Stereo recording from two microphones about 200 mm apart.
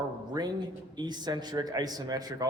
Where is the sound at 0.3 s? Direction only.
20° right (ahead or behind).